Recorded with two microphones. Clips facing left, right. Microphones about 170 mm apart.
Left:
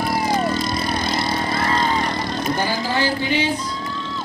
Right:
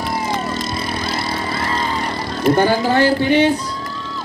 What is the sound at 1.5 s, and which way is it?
Vehicle, 45° left (ahead or behind).